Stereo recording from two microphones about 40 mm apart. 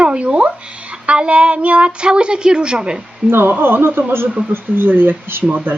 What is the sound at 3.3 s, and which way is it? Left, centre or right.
A man's voice, right.